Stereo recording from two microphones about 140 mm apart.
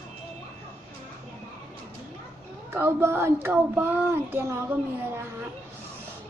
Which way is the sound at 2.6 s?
15° right (ahead or behind).